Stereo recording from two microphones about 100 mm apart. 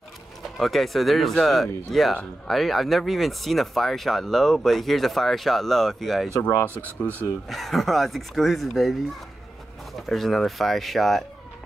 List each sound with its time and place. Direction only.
0.4 s speech: centre (ahead or behind)
6.4 s speech: 20° left (ahead or behind)
7.4 s speech: centre (ahead or behind)
9.9 s speech: centre (ahead or behind)